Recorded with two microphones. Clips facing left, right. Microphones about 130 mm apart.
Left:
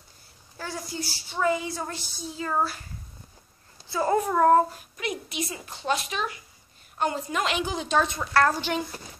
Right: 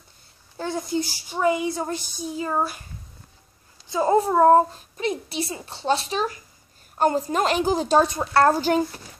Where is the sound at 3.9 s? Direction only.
20° right (ahead or behind); by 8.8 s 40° right (ahead or behind).